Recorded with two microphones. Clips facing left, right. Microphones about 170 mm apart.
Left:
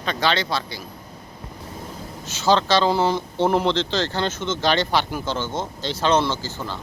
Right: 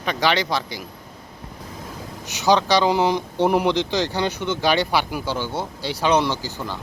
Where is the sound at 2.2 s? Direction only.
15° right (ahead or behind).